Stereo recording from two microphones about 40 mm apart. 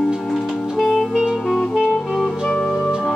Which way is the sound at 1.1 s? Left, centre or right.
Centre.